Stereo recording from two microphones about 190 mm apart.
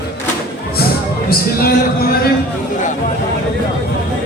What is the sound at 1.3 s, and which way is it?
Speech, 50° left (ahead or behind).